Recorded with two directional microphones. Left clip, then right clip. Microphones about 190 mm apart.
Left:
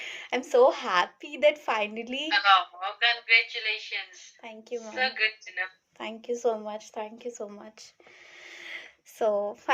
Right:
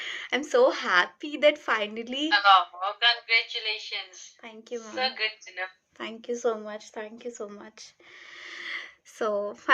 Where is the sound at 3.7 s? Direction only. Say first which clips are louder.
Left 1 dB; 75° left (ahead or behind).